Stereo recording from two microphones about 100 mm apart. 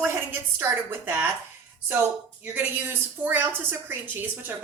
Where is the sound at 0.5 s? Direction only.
20° right (ahead or behind).